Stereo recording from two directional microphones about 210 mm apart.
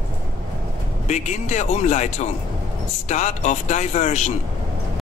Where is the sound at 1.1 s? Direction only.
35° left (ahead or behind).